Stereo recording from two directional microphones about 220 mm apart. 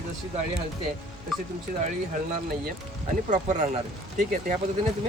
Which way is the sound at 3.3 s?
35° right (ahead or behind).